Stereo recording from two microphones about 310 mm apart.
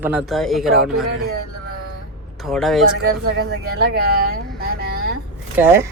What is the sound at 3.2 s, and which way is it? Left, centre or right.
Speech, right.